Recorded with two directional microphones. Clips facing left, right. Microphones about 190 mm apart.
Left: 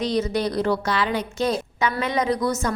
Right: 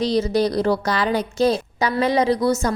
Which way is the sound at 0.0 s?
35° right (ahead or behind).